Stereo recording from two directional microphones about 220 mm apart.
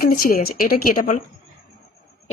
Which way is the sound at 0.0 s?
40° left (ahead or behind).